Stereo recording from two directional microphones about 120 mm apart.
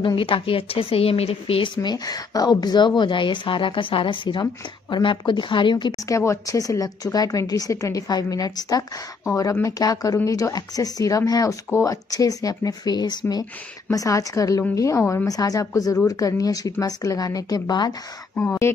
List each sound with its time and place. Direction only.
0.0 s a woman's voice: 45° left (ahead or behind)
1.8 s a woman's voice: 35° left (ahead or behind)
6.0 s a woman's voice: 25° left (ahead or behind)
18.3 s speech: 20° left (ahead or behind)